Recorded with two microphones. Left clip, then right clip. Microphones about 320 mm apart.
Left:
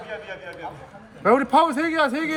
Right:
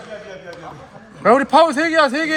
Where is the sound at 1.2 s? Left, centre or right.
Right.